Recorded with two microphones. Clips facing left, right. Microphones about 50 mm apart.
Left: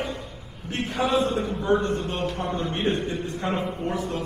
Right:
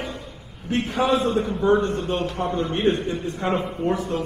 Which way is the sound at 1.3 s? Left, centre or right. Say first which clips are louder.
Right 4 dB; right.